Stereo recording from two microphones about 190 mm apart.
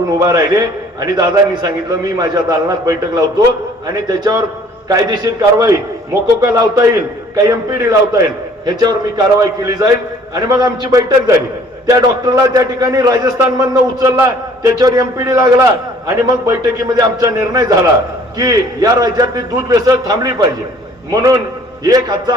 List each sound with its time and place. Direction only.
0.2 s a man's voice: 20° right (ahead or behind)